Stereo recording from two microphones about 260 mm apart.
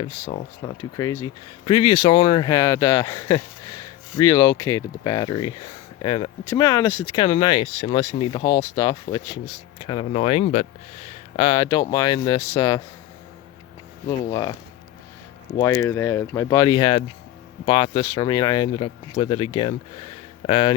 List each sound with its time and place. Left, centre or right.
0.0 s speech: left
14.3 s speech: centre
15.5 s speech: centre